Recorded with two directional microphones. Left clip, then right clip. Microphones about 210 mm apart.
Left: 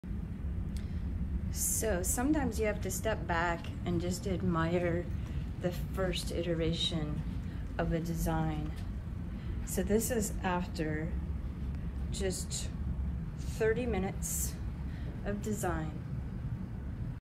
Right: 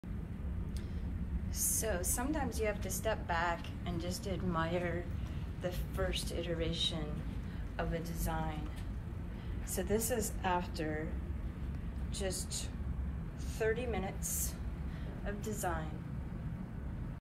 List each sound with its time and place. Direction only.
1.6 s a woman's voice: 15° right (ahead or behind)
9.8 s a woman's voice: 10° right (ahead or behind)
12.2 s a woman's voice: 15° right (ahead or behind)